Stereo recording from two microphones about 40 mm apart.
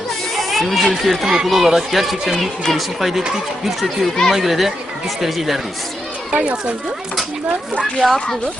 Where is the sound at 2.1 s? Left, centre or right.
Centre.